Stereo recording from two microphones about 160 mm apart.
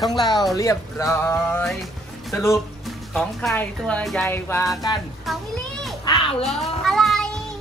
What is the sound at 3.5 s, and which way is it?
A woman's voice, 5° left (ahead or behind).